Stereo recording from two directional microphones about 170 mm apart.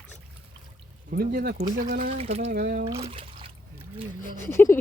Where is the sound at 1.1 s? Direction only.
60° right (ahead or behind).